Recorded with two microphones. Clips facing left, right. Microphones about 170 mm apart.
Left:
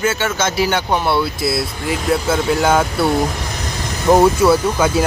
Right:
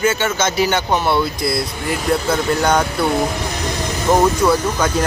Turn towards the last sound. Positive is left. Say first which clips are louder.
# left 2 dB
turn(degrees=5)  # may be behind; listen again after turning